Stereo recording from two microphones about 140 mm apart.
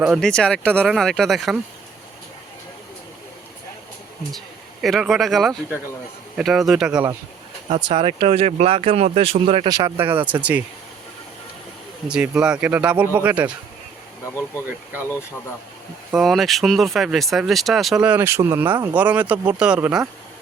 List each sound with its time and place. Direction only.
0.0 s speech: centre (ahead or behind)
4.3 s speech: centre (ahead or behind)
7.7 s speech: 35° right (ahead or behind)
9.6 s speech: 25° right (ahead or behind)
10.0 s speech: 15° right (ahead or behind)
12.0 s speech: 5° right (ahead or behind)
16.1 s speech: centre (ahead or behind)